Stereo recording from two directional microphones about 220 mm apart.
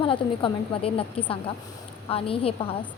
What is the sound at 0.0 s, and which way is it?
A woman's voice, 25° left (ahead or behind).